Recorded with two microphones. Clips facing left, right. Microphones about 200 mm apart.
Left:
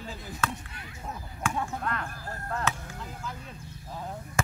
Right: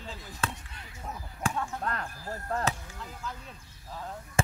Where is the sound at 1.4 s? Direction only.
35° right (ahead or behind).